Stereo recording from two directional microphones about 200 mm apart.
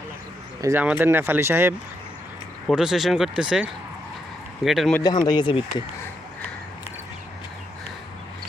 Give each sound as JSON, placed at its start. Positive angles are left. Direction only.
{"t": 0.6, "sound": "speech", "side_deg": -10}
{"t": 2.6, "sound": "speech", "side_deg": 0}
{"t": 4.9, "sound": "speech", "side_deg": 20}